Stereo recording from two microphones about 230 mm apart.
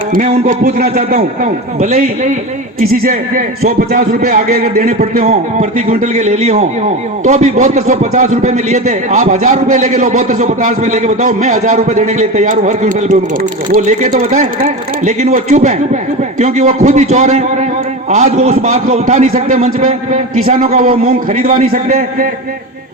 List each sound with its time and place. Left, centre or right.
0.1 s a man's voice: right